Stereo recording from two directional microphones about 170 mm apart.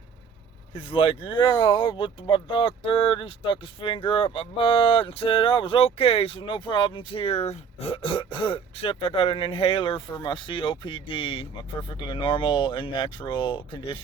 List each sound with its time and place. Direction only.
0.7 s speech: 30° left (ahead or behind)